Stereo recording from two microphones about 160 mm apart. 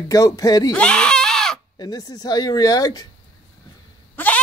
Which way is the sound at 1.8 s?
25° left (ahead or behind).